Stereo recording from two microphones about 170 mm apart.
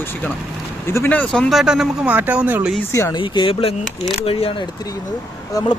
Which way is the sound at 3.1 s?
30° left (ahead or behind).